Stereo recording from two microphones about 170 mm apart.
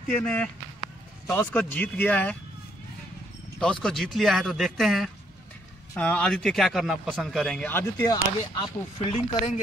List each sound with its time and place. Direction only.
0.2 s speech: 10° left (ahead or behind)
3.5 s speech: 5° left (ahead or behind)
8.0 s speech: 25° left (ahead or behind)